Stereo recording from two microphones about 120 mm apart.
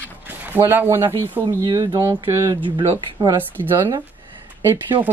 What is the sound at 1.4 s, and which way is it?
Speech, 35° right (ahead or behind).